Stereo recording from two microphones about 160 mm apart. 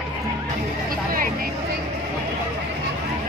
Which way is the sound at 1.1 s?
60° right (ahead or behind).